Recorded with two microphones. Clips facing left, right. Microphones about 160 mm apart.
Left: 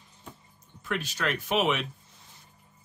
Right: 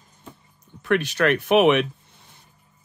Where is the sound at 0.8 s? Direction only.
65° right (ahead or behind).